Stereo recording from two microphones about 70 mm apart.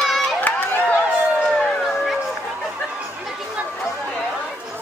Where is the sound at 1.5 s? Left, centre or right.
Centre.